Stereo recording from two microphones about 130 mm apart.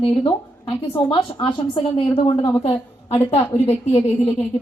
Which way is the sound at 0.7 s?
40° left (ahead or behind).